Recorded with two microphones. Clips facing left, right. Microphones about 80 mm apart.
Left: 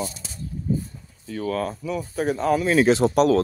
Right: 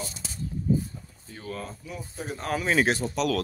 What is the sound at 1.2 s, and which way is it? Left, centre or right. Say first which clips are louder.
Speech: left 11 dB; left.